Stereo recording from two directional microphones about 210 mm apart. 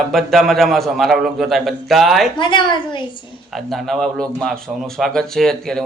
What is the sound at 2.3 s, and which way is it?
Speech, 20° left (ahead or behind).